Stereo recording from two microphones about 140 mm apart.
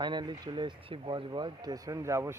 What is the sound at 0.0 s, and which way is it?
Speech, 30° right (ahead or behind).